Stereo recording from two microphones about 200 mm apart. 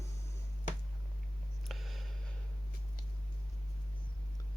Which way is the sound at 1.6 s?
Centre (ahead or behind).